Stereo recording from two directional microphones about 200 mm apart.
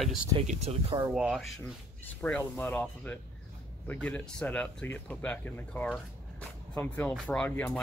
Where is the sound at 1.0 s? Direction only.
Centre (ahead or behind).